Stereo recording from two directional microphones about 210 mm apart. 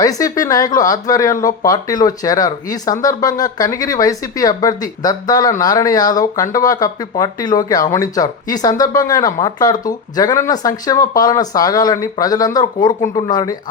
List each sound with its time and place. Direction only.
0.0 s speech: 15° left (ahead or behind)